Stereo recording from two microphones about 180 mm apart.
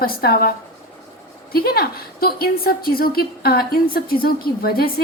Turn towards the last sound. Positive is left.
turn(degrees=55)  # may be behind; listen again after turning